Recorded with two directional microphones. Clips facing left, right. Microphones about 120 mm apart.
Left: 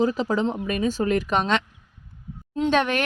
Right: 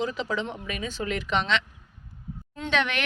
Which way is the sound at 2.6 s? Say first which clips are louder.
Left 6 dB; 40° left (ahead or behind).